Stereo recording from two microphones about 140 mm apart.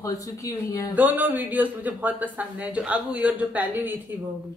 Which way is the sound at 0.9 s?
10° right (ahead or behind).